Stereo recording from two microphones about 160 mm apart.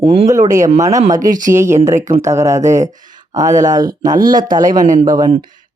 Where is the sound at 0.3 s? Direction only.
20° right (ahead or behind).